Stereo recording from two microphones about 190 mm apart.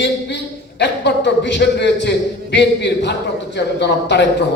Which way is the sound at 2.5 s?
65° left (ahead or behind).